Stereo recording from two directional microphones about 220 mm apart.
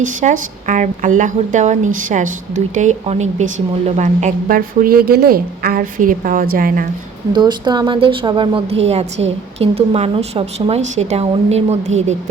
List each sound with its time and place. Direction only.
0.0 s a woman's voice: 35° right (ahead or behind)
7.3 s a woman's voice: 20° right (ahead or behind)